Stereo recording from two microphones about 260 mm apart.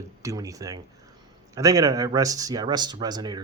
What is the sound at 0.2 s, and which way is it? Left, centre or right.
Speech, centre.